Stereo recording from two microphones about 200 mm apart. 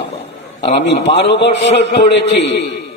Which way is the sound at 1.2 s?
60° left (ahead or behind).